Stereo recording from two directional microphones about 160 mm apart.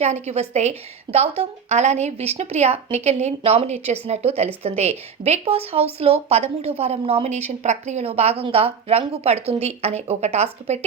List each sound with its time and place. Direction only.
0.0 s a woman's voice: 45° right (ahead or behind)